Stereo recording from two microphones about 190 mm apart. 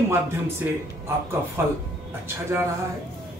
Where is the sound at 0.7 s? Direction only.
10° right (ahead or behind).